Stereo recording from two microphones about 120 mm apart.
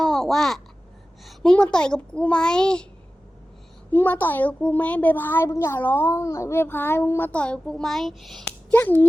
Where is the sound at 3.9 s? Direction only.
15° left (ahead or behind).